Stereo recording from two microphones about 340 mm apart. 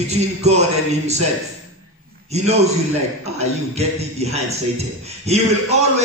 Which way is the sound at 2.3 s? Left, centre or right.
Centre.